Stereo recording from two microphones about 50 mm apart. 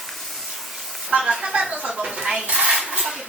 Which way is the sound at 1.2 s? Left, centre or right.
Centre.